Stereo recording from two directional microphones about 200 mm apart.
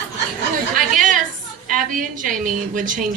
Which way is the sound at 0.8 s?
40° right (ahead or behind).